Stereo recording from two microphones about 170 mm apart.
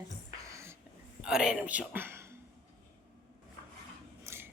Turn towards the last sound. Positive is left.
turn(degrees=-15)  # may be behind; listen again after turning